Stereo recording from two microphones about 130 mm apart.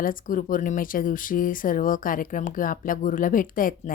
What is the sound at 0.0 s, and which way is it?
Speech, 90° left.